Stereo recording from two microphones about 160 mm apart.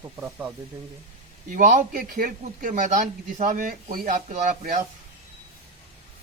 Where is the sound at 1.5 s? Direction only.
60° right (ahead or behind).